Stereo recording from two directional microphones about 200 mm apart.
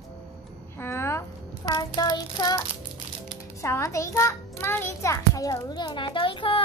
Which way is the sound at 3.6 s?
15° left (ahead or behind).